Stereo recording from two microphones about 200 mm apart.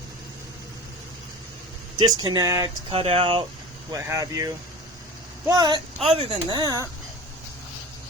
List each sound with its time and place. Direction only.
2.0 s speech: 20° right (ahead or behind)
2.9 s speech: 30° right (ahead or behind)
3.9 s speech: 15° right (ahead or behind)